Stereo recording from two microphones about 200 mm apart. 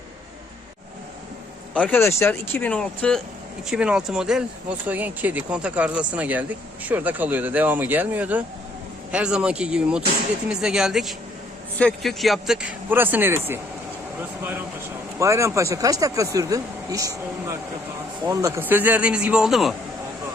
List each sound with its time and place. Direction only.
1.7 s speech: 10° left (ahead or behind); by 13.6 s 10° right (ahead or behind)
15.2 s speech: 15° right (ahead or behind)